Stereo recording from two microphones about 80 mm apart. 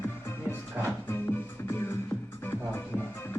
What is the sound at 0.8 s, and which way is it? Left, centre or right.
Music, centre.